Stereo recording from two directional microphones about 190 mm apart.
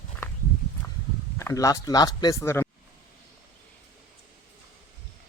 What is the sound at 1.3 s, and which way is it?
Speech, 15° left (ahead or behind).